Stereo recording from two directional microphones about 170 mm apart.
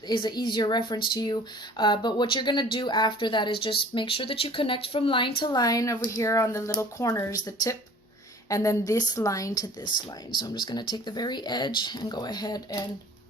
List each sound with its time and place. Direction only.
0.1 s speech: 25° left (ahead or behind)